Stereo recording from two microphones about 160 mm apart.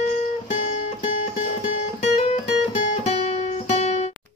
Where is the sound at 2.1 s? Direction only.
40° left (ahead or behind).